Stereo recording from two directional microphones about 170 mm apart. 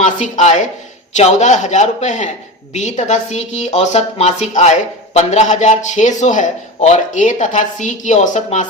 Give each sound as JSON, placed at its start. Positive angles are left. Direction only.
{"t": 0.2, "sound": "a woman's voice", "side_deg": 45}